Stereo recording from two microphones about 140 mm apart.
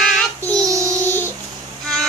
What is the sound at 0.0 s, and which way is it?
Child singing, centre (ahead or behind).